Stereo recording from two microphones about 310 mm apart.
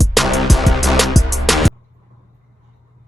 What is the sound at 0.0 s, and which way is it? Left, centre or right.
Music, centre.